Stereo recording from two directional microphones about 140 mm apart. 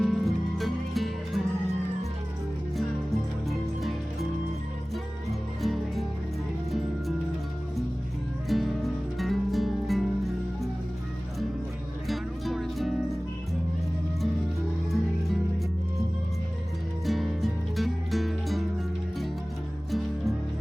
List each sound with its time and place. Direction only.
0.0 s music: centre (ahead or behind)
3.5 s music: centre (ahead or behind)
5.6 s music: centre (ahead or behind)
8.4 s music: centre (ahead or behind)
12.0 s music: centre (ahead or behind)
17.1 s music: centre (ahead or behind)
19.9 s music: centre (ahead or behind)